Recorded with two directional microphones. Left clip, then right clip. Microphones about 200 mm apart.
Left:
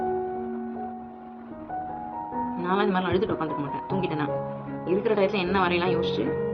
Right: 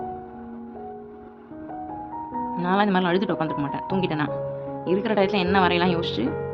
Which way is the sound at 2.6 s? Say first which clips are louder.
Right 4 dB; 55° right (ahead or behind).